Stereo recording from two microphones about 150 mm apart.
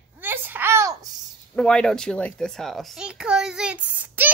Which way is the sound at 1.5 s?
5° left (ahead or behind).